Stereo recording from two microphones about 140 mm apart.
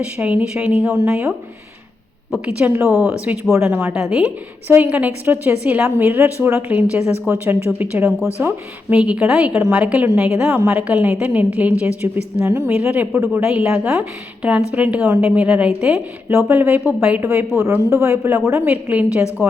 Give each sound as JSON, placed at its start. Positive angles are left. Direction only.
{"t": 0.0, "sound": "a woman's voice", "side_deg": -10}
{"t": 2.3, "sound": "a woman's voice", "side_deg": -10}
{"t": 3.5, "sound": "a woman's voice", "side_deg": -20}
{"t": 9.0, "sound": "a woman's voice", "side_deg": -10}
{"t": 13.5, "sound": "a woman's voice", "side_deg": -5}